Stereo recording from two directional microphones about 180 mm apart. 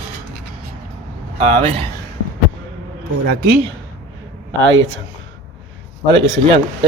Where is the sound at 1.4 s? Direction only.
35° right (ahead or behind).